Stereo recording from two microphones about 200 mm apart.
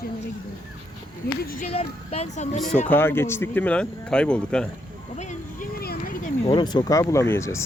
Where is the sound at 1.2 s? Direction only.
50° left (ahead or behind).